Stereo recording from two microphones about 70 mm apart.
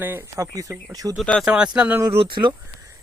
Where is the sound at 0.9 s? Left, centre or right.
Right.